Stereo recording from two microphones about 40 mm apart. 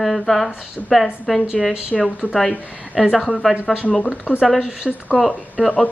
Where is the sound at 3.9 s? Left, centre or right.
Left.